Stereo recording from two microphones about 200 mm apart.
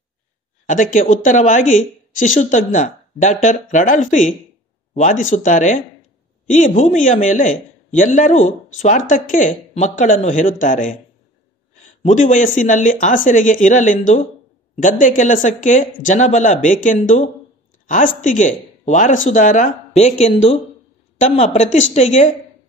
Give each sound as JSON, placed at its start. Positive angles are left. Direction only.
{"t": 0.7, "sound": "a man's voice", "side_deg": 40}
{"t": 12.0, "sound": "a man's voice", "side_deg": 40}